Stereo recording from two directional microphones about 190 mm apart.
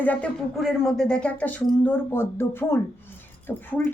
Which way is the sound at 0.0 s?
5° left (ahead or behind).